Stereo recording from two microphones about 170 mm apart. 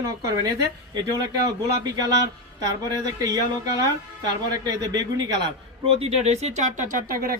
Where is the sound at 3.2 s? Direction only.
20° right (ahead or behind).